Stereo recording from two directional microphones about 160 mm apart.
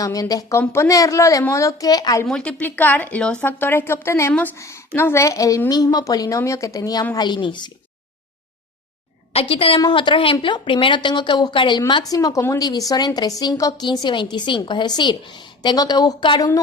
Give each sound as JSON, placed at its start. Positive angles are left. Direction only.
{"t": 0.0, "sound": "speech", "side_deg": 20}
{"t": 2.2, "sound": "a woman's voice", "side_deg": 5}
{"t": 9.3, "sound": "a woman's voice", "side_deg": 35}